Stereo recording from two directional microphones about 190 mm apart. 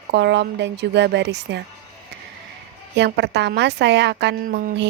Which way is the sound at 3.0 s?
65° right (ahead or behind).